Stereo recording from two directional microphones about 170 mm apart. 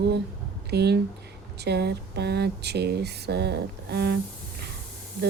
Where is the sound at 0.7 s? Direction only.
75° right (ahead or behind).